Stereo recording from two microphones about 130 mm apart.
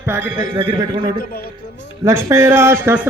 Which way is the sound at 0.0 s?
15° right (ahead or behind).